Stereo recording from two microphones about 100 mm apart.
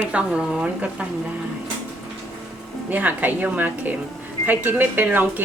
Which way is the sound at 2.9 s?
15° right (ahead or behind).